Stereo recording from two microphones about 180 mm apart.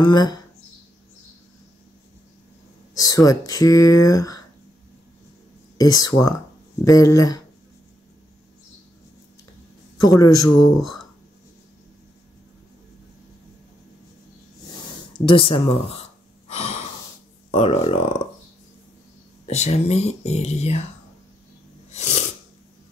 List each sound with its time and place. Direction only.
0.0 s speech: 25° left (ahead or behind)
3.0 s speech: 20° left (ahead or behind)
5.8 s speech: 20° left (ahead or behind)
10.0 s speech: 20° left (ahead or behind)
15.1 s speech: 30° left (ahead or behind)
16.4 s breathing: 35° left (ahead or behind)
17.5 s speech: 35° left (ahead or behind)
19.4 s speech: 35° left (ahead or behind)
21.9 s a sound: 40° left (ahead or behind)